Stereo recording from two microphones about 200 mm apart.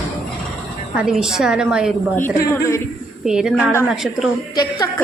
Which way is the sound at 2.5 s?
15° left (ahead or behind).